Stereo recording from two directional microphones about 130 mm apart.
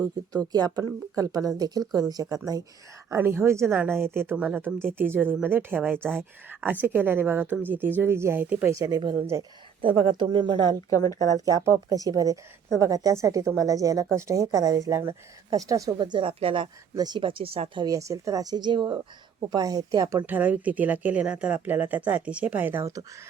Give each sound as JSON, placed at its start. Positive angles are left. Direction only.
{"t": 0.3, "sound": "a woman's voice", "side_deg": -30}
{"t": 3.1, "sound": "a woman's voice", "side_deg": -15}
{"t": 8.7, "sound": "a woman's voice", "side_deg": -25}
{"t": 9.8, "sound": "speech", "side_deg": -40}
{"t": 10.9, "sound": "speech", "side_deg": 25}
{"t": 11.3, "sound": "a woman's voice", "side_deg": -25}
{"t": 16.0, "sound": "speech", "side_deg": -40}
{"t": 16.9, "sound": "speech", "side_deg": -30}
{"t": 17.8, "sound": "a woman's voice", "side_deg": -25}
{"t": 20.2, "sound": "speech", "side_deg": -15}